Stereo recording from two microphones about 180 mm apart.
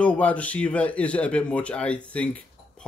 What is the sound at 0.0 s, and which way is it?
Speech, 10° left (ahead or behind).